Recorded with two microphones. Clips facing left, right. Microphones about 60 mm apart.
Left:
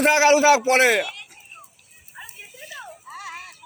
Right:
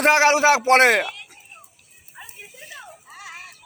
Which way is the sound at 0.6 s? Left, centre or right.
Right.